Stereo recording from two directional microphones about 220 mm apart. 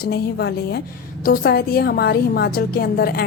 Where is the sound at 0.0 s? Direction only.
45° left (ahead or behind).